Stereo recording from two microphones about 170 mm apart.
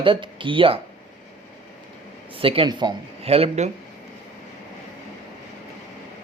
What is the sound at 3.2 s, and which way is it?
Speech, 35° right (ahead or behind).